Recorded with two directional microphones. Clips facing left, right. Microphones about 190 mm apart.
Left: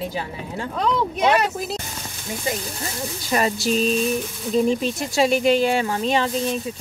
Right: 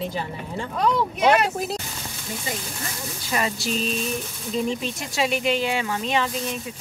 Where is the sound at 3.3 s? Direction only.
45° left (ahead or behind).